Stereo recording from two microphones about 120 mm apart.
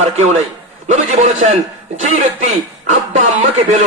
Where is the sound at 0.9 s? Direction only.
90° right.